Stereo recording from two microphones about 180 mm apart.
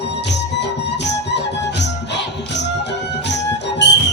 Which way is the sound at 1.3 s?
75° left (ahead or behind).